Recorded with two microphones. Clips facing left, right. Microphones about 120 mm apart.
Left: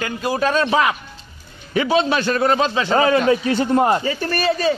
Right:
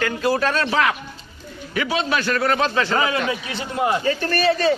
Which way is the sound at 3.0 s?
40° left (ahead or behind).